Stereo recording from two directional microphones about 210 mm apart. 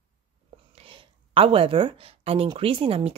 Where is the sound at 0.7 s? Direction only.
25° right (ahead or behind).